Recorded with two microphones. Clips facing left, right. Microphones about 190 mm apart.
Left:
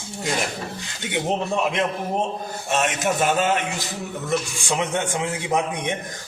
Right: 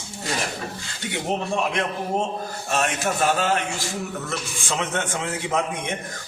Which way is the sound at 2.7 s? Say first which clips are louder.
Left 2 dB; 20° left (ahead or behind).